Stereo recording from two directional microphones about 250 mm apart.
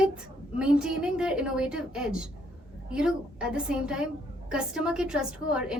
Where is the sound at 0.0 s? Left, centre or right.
Centre.